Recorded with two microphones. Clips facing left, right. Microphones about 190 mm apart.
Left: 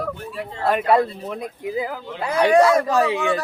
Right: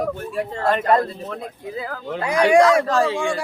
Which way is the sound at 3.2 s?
10° right (ahead or behind).